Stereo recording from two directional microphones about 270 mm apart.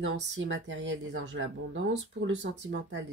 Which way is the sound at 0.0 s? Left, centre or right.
Right.